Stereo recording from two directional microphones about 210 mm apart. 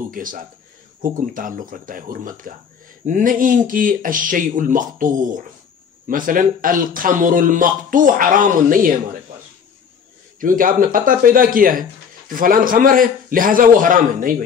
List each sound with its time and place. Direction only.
0.1 s speech: 40° right (ahead or behind)
10.4 s speech: 40° right (ahead or behind)